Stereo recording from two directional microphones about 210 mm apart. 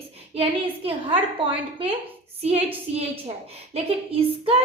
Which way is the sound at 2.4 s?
30° right (ahead or behind).